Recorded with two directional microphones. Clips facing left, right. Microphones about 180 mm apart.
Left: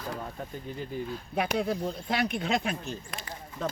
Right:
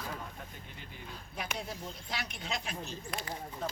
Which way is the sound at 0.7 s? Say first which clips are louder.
Left 15 dB; 40° left (ahead or behind).